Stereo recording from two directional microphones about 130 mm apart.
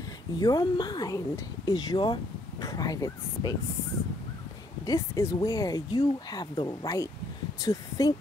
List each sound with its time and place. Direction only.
0.4 s speech: 30° left (ahead or behind)
4.8 s speech: 25° left (ahead or behind)